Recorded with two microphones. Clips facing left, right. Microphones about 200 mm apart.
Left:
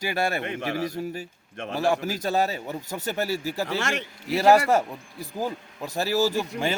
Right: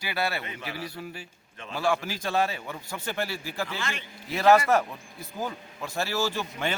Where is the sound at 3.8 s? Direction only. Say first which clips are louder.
Left 6 dB; 75° left (ahead or behind).